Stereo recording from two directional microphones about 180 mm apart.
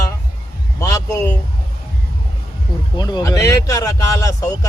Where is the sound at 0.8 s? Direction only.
20° left (ahead or behind).